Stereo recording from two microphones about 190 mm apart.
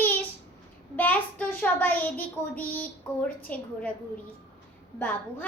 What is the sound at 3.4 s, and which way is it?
Speech, 5° left (ahead or behind).